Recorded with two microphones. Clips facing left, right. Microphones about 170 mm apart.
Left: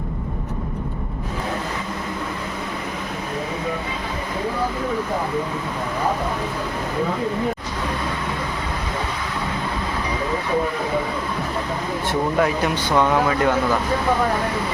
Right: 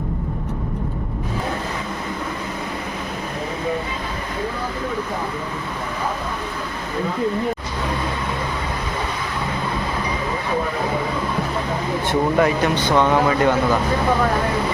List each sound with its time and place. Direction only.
12.4 s speech: centre (ahead or behind)